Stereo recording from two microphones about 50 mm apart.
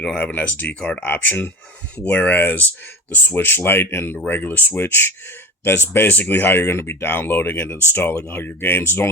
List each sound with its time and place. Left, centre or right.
0.0 s speech: centre
0.3 s speech: left
4.3 s speech: left